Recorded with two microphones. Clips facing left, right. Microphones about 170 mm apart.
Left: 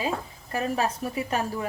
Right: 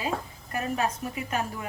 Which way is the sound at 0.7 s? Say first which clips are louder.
Left 2 dB; 35° left (ahead or behind).